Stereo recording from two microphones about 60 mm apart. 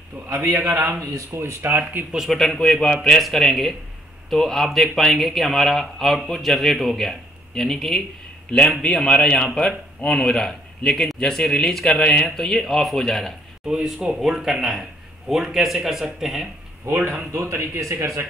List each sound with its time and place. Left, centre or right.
0.3 s speech: right
2.1 s a man's voice: centre
16.8 s speech: right